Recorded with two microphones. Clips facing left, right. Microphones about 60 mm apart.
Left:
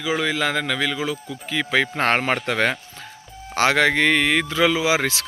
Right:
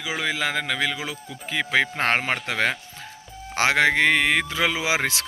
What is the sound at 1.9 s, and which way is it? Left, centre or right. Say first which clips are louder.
Speech: left 3 dB; centre.